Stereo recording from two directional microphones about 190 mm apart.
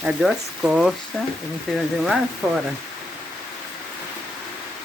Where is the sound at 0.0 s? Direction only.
5° right (ahead or behind).